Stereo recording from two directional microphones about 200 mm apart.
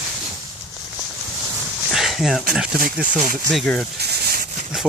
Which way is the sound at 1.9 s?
Centre (ahead or behind).